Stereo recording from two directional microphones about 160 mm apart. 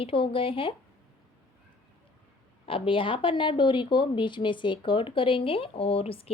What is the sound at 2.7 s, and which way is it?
A woman's voice, 35° left (ahead or behind).